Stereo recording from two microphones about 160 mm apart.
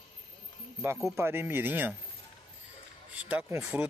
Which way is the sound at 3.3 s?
10° right (ahead or behind).